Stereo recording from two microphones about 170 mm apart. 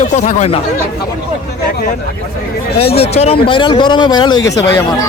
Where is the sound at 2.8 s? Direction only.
35° left (ahead or behind).